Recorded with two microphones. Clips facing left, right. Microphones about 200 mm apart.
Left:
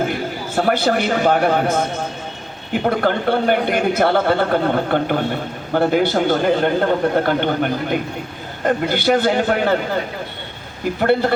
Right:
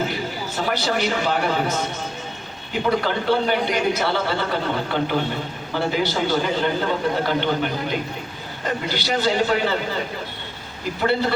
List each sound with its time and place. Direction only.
0.1 s a man's voice: 55° left (ahead or behind)
11.0 s a man's voice: 55° left (ahead or behind)